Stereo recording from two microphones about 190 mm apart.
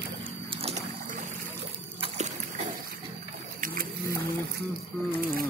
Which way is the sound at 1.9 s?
35° right (ahead or behind).